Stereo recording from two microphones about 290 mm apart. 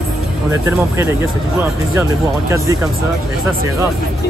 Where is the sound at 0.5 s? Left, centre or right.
Centre.